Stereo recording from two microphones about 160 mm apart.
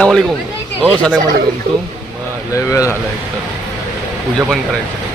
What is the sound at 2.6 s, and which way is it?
Speech, 20° left (ahead or behind).